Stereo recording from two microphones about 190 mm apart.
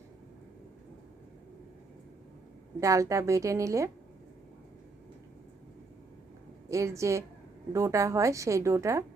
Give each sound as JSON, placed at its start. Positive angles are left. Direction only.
{"t": 2.8, "sound": "a woman's voice", "side_deg": -15}
{"t": 6.7, "sound": "a woman's voice", "side_deg": -15}